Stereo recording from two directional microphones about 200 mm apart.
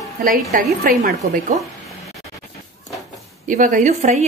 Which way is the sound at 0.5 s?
45° right (ahead or behind).